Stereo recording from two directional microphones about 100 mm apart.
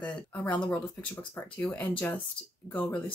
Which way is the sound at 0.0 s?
15° left (ahead or behind).